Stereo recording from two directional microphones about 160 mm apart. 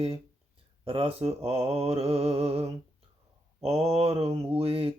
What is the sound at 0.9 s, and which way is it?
Mantra, 35° right (ahead or behind).